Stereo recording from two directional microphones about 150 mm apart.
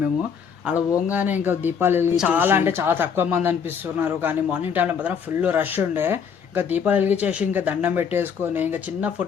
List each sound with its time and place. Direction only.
0.9 s speech: 20° left (ahead or behind)
1.1 s speech: 10° right (ahead or behind)